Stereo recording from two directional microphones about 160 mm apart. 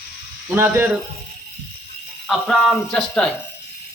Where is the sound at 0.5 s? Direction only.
15° right (ahead or behind).